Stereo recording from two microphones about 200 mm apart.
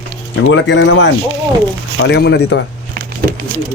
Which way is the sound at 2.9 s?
50° right (ahead or behind).